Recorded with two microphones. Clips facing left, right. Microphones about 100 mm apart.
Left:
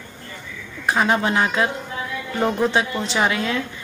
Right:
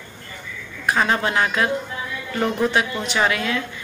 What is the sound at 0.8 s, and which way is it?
Speech, 20° left (ahead or behind).